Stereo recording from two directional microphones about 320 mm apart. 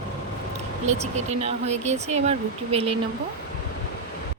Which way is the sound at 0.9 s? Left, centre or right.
Right.